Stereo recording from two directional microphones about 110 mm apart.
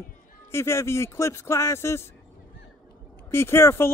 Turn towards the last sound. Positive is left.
turn(degrees=25)  # may be behind; listen again after turning